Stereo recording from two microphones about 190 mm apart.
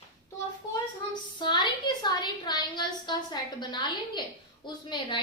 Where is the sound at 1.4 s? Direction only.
25° left (ahead or behind).